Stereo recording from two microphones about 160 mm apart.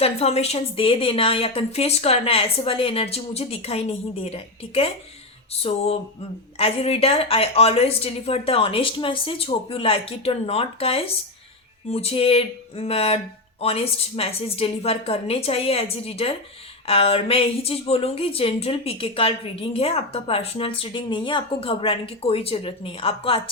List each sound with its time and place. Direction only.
0.0 s a woman's voice: 40° left (ahead or behind)